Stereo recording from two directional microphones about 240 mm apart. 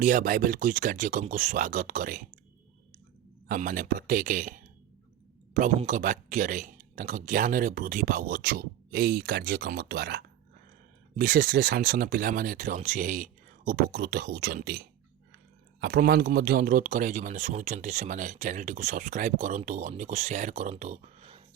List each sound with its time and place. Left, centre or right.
0.0 s speech: right
3.5 s a man's voice: right